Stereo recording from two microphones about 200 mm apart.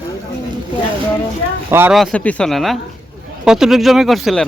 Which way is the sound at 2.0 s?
5° left (ahead or behind).